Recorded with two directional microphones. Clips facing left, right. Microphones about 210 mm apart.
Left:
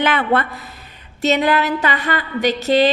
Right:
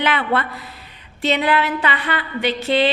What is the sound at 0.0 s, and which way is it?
A woman's voice, 45° left (ahead or behind).